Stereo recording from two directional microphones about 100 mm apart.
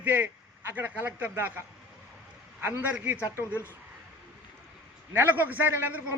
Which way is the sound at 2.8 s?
15° right (ahead or behind).